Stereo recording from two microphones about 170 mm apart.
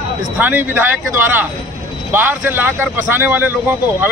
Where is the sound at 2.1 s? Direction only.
10° right (ahead or behind).